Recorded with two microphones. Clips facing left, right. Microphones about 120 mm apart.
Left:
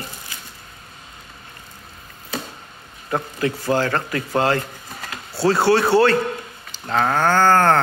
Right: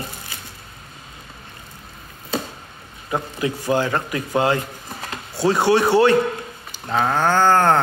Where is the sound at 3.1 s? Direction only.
15° right (ahead or behind).